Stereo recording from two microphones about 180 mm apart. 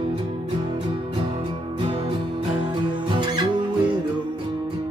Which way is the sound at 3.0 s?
25° right (ahead or behind).